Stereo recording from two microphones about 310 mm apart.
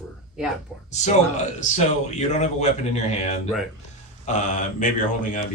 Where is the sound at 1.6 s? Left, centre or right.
Left.